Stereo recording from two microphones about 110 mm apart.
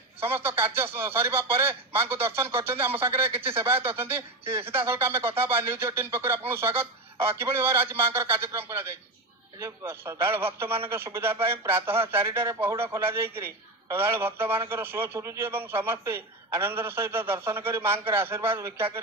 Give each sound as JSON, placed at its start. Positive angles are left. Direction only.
{"t": 0.2, "sound": "a man's voice", "side_deg": -20}